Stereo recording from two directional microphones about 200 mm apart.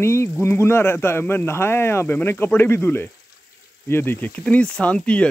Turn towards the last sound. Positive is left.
turn(degrees=5)  # may be behind; listen again after turning